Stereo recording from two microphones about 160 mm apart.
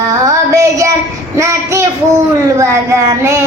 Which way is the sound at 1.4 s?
20° right (ahead or behind).